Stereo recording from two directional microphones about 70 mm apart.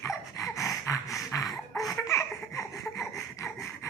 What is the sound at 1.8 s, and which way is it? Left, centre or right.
Baby laughter, left.